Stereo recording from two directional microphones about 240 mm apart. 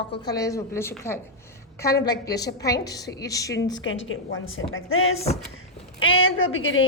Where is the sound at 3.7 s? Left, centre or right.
Left.